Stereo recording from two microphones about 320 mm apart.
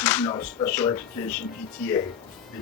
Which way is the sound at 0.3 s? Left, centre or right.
Centre.